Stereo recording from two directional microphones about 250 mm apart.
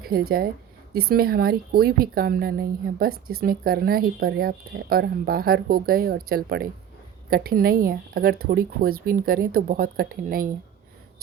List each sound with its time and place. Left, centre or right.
0.0 s speech: right